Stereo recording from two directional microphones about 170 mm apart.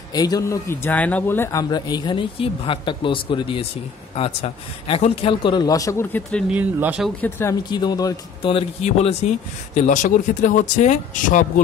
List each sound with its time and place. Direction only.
0.1 s speech: 20° left (ahead or behind)
6.5 s speech: 10° right (ahead or behind)
7.2 s speech: 15° left (ahead or behind)
7.7 s speech: 25° left (ahead or behind); by 11.6 s 50° left (ahead or behind)